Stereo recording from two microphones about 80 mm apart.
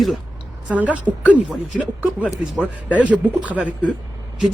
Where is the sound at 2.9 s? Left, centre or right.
Centre.